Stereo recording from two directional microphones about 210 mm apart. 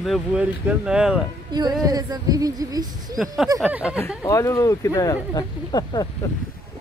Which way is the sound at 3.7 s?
5° right (ahead or behind).